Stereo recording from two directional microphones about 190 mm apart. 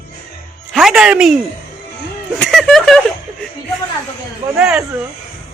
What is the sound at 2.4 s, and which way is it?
Speech, centre (ahead or behind).